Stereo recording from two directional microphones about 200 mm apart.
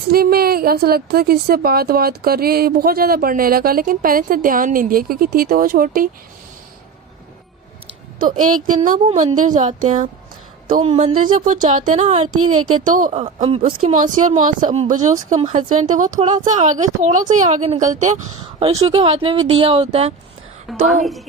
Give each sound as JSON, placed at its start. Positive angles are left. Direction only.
{"t": 0.1, "sound": "a woman's voice", "side_deg": -50}
{"t": 8.6, "sound": "a woman's voice", "side_deg": -40}
{"t": 12.3, "sound": "speech", "side_deg": -90}
{"t": 12.8, "sound": "a woman's voice", "side_deg": -40}
{"t": 18.7, "sound": "a woman's voice", "side_deg": -20}
{"t": 20.7, "sound": "a woman's voice", "side_deg": 0}